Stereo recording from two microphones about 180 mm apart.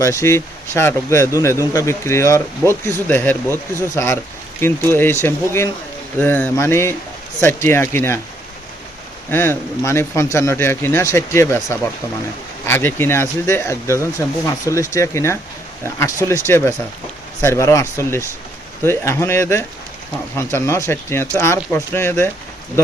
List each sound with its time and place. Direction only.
0.0 s speech: 15° left (ahead or behind)
9.3 s speech: 10° left (ahead or behind)